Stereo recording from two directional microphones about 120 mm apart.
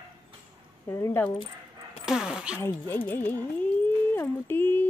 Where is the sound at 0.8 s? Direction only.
25° left (ahead or behind).